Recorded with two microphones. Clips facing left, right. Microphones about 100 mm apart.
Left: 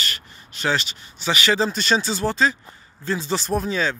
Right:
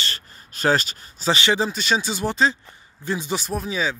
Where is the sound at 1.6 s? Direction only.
5° right (ahead or behind).